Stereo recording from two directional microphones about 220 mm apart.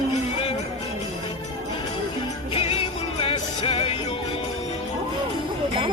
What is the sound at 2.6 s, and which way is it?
Music, 25° left (ahead or behind).